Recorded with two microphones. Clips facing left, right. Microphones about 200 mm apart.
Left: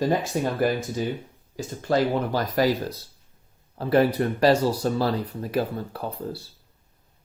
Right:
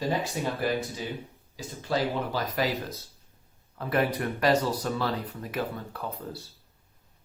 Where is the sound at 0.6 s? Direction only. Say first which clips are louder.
Left 5 dB; 45° left (ahead or behind).